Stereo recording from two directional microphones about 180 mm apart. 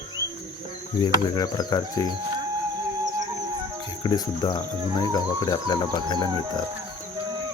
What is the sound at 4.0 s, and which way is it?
Speech, 25° left (ahead or behind).